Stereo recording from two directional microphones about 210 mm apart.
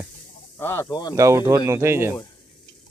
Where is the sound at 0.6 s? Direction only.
10° left (ahead or behind).